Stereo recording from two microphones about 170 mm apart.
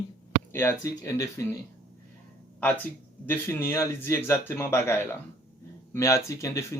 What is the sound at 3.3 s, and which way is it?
Speech, 15° left (ahead or behind).